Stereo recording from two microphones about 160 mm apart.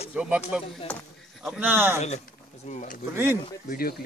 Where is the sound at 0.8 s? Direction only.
10° left (ahead or behind).